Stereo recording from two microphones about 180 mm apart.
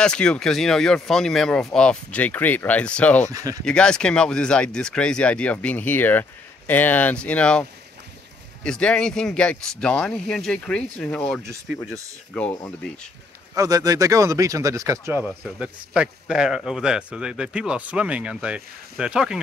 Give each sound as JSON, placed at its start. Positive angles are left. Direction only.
{"t": 0.0, "sound": "speech", "side_deg": 5}
{"t": 3.3, "sound": "speech", "side_deg": -20}
{"t": 3.6, "sound": "speech", "side_deg": 5}
{"t": 8.6, "sound": "speech", "side_deg": 5}
{"t": 11.4, "sound": "speech", "side_deg": -15}
{"t": 12.6, "sound": "speech", "side_deg": 5}
{"t": 13.6, "sound": "speech", "side_deg": -20}
{"t": 15.2, "sound": "speech", "side_deg": -5}